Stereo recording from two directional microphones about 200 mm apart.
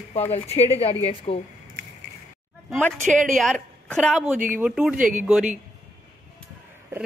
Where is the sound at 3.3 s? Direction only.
Centre (ahead or behind).